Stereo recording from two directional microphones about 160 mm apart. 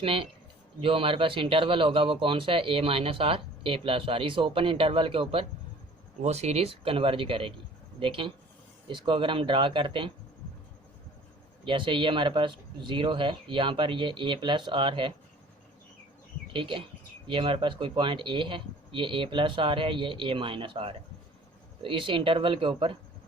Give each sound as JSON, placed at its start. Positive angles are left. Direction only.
{"t": 0.0, "sound": "speech", "side_deg": -35}
{"t": 11.6, "sound": "speech", "side_deg": -30}
{"t": 16.5, "sound": "speech", "side_deg": -30}